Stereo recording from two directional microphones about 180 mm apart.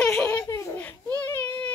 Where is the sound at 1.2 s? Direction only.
10° left (ahead or behind).